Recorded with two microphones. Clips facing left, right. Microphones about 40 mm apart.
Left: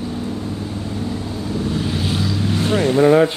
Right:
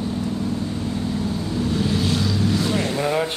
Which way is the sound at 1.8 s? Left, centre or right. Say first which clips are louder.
Even; centre.